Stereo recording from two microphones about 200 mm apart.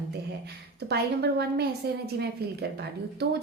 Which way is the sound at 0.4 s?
55° right (ahead or behind).